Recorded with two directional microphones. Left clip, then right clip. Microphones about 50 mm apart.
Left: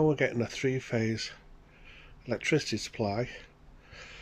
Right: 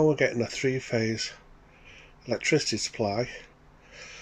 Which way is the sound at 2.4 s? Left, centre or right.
Centre.